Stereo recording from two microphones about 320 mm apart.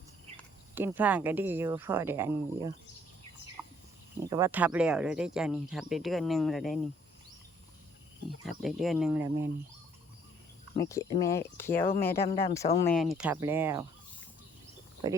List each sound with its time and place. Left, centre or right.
0.8 s speech: centre
3.6 s a sound: centre
4.3 s speech: centre
8.4 s speech: centre
10.8 s speech: centre
12.2 s speech: centre
15.0 s speech: centre